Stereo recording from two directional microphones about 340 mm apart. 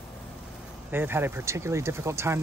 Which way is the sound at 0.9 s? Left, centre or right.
Centre.